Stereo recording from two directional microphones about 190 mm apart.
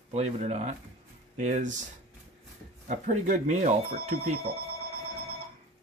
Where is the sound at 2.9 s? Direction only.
40° right (ahead or behind).